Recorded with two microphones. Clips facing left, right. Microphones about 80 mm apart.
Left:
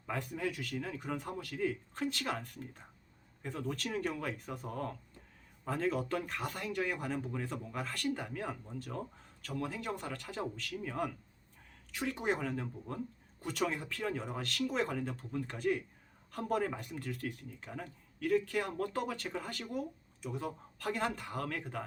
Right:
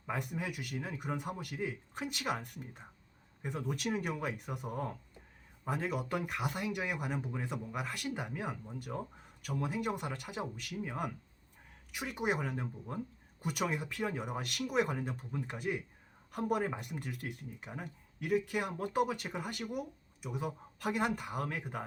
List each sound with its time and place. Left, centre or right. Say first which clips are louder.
0.0 s speech: left 1 dB; centre